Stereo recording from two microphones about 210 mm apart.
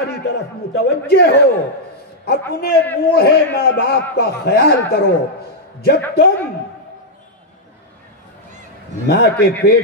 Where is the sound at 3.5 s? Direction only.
50° left (ahead or behind).